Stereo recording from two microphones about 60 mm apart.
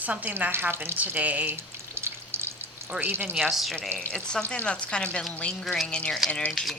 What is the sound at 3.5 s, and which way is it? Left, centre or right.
Speech, centre.